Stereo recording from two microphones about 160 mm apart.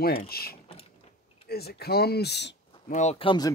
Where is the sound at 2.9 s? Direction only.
45° left (ahead or behind).